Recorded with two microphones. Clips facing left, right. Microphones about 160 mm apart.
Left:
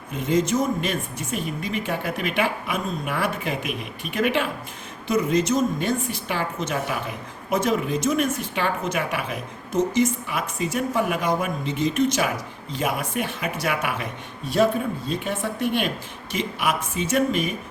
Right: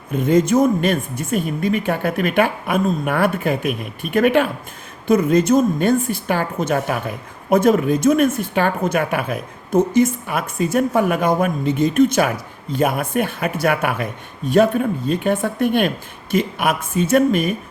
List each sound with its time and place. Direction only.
0.1 s a woman's voice: 55° right (ahead or behind)
15.1 s a woman's voice: 60° right (ahead or behind)